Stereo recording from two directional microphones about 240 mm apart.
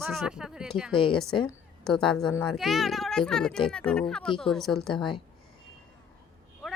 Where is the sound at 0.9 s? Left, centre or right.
Left.